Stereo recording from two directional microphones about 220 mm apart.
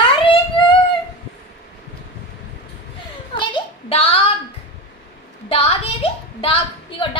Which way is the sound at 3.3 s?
20° left (ahead or behind).